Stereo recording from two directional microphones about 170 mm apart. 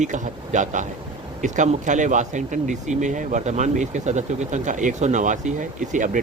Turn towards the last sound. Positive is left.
turn(degrees=-50)  # may be behind; listen again after turning